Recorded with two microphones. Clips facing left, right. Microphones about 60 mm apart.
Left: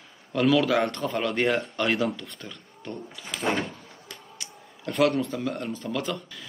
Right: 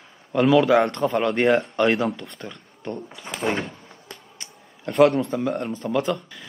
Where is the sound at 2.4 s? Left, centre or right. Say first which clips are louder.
Right 4 dB; right.